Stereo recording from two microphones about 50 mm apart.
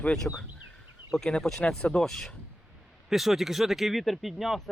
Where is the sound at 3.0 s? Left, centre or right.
Centre.